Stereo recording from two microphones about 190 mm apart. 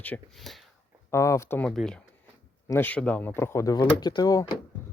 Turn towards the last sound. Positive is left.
turn(degrees=20)  # may be behind; listen again after turning